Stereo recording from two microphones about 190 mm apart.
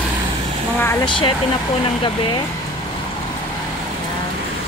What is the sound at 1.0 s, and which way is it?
Speech, 25° left (ahead or behind).